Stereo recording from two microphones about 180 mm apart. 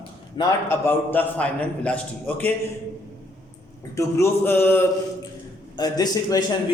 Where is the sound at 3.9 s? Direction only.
15° left (ahead or behind).